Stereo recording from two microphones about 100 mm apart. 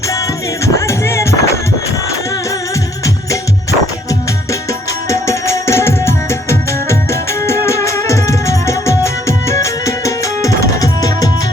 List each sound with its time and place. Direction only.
0.1 s music: 30° left (ahead or behind)
3.0 s music: 35° left (ahead or behind)
5.0 s music: 30° left (ahead or behind)